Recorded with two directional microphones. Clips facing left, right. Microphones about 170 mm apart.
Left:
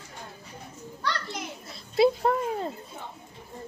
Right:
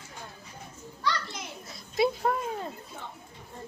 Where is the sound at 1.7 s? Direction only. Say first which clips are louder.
Left 5 dB; 30° left (ahead or behind).